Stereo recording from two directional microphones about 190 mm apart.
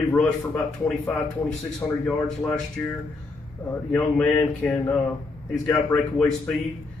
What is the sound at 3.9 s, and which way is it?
Speech, 10° left (ahead or behind).